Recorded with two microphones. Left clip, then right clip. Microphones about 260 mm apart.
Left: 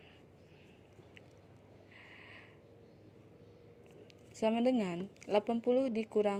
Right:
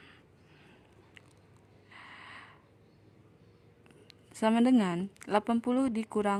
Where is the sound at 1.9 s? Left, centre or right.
Right.